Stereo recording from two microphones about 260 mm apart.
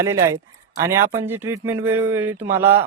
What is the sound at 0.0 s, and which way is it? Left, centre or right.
A man's voice, centre.